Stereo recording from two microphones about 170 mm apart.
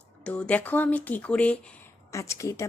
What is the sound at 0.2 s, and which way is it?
Speech, 5° left (ahead or behind).